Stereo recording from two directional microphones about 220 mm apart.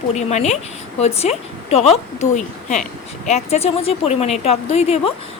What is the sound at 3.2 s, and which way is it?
Speech, 30° left (ahead or behind).